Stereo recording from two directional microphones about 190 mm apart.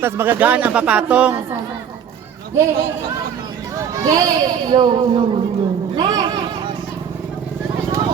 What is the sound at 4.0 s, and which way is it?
A child's voice, 20° right (ahead or behind).